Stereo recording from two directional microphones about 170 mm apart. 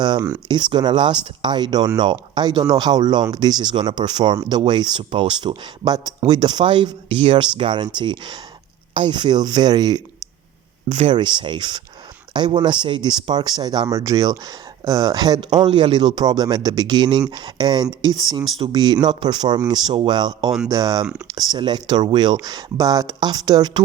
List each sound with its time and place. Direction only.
0.0 s speech: 25° right (ahead or behind)
11.1 s speech: 25° right (ahead or behind)